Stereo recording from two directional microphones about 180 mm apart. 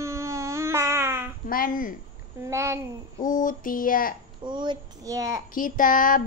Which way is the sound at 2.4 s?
15° right (ahead or behind).